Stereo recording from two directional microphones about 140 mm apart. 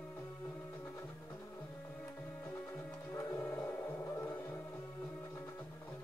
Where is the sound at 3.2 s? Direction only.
20° left (ahead or behind).